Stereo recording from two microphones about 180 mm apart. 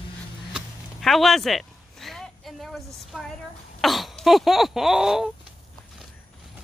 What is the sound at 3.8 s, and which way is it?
Speech, centre (ahead or behind).